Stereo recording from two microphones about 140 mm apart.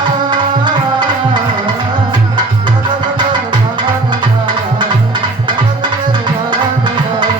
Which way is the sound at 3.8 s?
35° right (ahead or behind).